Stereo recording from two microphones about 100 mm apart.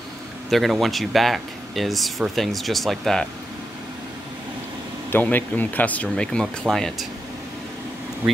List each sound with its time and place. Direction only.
0.5 s speech: centre (ahead or behind)
5.1 s speech: 15° left (ahead or behind); by 7.1 s centre (ahead or behind)